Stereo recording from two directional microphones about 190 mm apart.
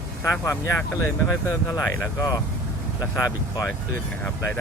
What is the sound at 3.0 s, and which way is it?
Speech, 15° left (ahead or behind).